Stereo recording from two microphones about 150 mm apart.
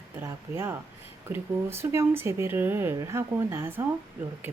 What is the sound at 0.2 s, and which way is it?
Speech, 15° right (ahead or behind).